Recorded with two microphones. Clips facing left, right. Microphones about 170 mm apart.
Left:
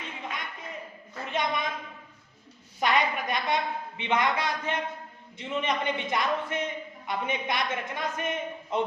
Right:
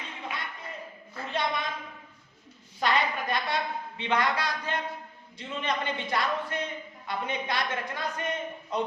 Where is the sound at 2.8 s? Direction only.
20° left (ahead or behind).